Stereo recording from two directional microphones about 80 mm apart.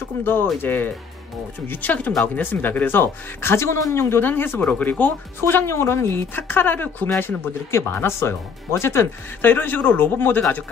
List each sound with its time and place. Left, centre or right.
0.2 s speech: left